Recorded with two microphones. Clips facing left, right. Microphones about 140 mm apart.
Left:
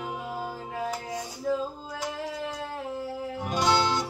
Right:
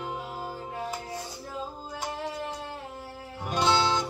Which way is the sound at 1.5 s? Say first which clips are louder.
Left 13 dB; 90° left.